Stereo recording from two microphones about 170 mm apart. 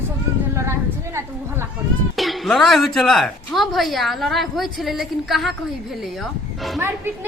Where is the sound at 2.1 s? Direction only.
Centre (ahead or behind).